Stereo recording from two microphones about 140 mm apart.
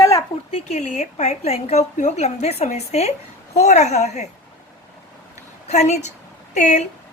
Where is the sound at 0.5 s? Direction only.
50° left (ahead or behind).